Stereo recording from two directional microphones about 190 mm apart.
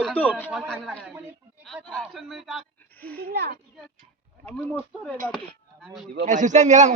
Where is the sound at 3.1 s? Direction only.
55° right (ahead or behind).